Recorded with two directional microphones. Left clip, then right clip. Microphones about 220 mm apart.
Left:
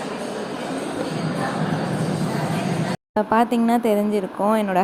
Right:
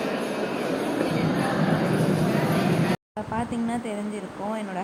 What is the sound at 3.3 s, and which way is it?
Speech, 30° left (ahead or behind).